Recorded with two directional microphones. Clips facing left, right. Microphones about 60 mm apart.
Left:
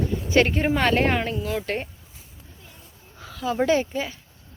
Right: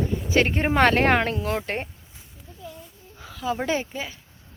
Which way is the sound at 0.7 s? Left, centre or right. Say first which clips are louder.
Right 2 dB; right.